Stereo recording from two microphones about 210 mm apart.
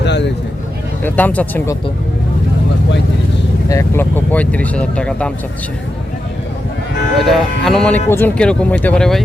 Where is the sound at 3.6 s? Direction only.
15° left (ahead or behind).